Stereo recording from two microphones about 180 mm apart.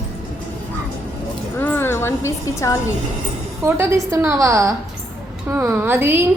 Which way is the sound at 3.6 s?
15° right (ahead or behind).